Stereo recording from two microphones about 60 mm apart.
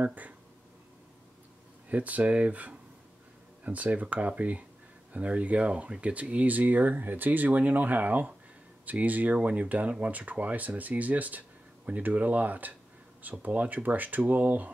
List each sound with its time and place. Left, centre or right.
0.0 s speech: right
1.9 s speech: right